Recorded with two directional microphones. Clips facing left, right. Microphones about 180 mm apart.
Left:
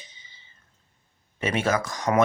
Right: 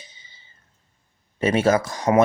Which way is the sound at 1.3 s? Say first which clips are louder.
Right 6 dB; 35° right (ahead or behind).